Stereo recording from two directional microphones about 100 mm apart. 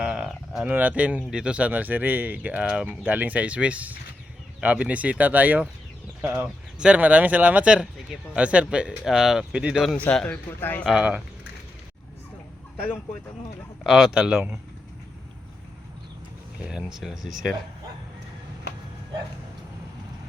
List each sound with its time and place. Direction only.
0.0 s a sound: 5° right (ahead or behind)
0.7 s speech: 15° right (ahead or behind)
10.0 s a man's voice: 10° left (ahead or behind)
10.8 s speech: 10° right (ahead or behind)
13.8 s speech: centre (ahead or behind)
16.6 s speech: 10° right (ahead or behind)